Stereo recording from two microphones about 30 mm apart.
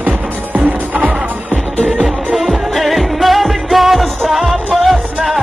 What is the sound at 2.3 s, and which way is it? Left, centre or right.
Music of asia, centre.